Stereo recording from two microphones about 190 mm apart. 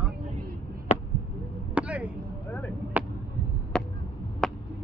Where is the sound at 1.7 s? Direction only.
5° right (ahead or behind).